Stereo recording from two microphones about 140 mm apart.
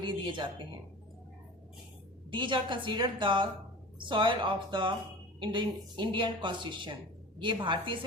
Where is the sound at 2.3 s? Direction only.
35° right (ahead or behind).